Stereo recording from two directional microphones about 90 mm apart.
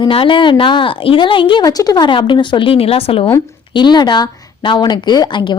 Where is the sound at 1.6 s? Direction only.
45° left (ahead or behind).